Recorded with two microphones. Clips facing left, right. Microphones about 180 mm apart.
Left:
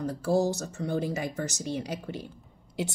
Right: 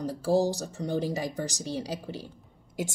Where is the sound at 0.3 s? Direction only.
30° right (ahead or behind).